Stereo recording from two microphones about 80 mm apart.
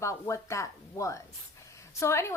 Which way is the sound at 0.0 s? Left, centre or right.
Left.